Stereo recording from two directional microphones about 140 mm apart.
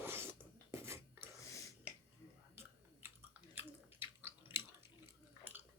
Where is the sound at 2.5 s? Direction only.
15° right (ahead or behind).